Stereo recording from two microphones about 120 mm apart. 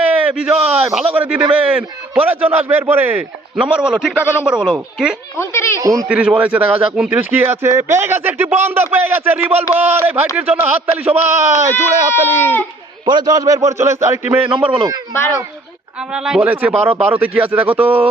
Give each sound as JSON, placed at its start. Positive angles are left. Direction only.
{"t": 0.0, "sound": "a man's voice", "side_deg": -10}
{"t": 5.4, "sound": "a child's voice", "side_deg": 20}
{"t": 5.8, "sound": "a man's voice", "side_deg": -30}
{"t": 6.1, "sound": "speech", "side_deg": -10}
{"t": 13.1, "sound": "a man's voice", "side_deg": -35}
{"t": 15.1, "sound": "a child's voice", "side_deg": 20}
{"t": 16.1, "sound": "speech", "side_deg": -5}